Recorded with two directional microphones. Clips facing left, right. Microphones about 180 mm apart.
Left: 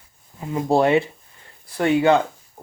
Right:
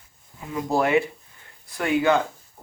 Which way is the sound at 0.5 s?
30° left (ahead or behind).